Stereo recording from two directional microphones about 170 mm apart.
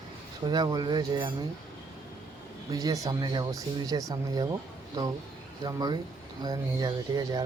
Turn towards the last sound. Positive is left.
turn(degrees=-25)  # may be behind; listen again after turning